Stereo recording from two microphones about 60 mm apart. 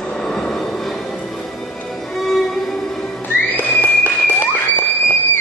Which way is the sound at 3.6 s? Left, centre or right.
Left.